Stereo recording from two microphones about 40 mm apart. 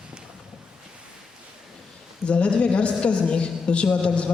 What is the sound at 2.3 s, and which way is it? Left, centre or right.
A woman's voice, left.